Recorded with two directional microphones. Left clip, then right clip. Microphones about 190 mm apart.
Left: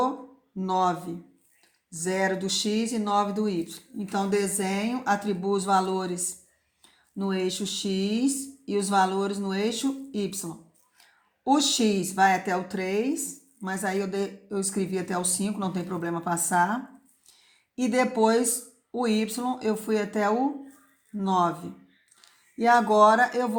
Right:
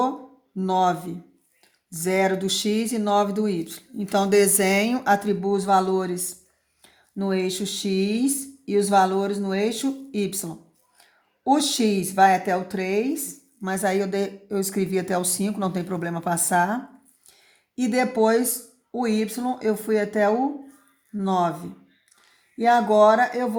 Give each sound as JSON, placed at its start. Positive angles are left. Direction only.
{"t": 0.6, "sound": "speech", "side_deg": -35}